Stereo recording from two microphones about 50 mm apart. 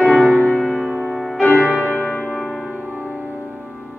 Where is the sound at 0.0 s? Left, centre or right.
Left.